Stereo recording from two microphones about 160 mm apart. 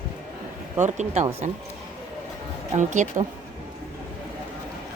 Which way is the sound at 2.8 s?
50° right (ahead or behind).